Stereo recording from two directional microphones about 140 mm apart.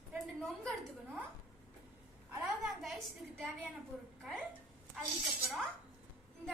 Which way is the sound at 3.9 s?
5° left (ahead or behind).